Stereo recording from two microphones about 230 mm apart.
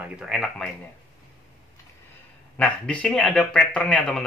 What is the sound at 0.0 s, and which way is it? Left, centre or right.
Speech, centre.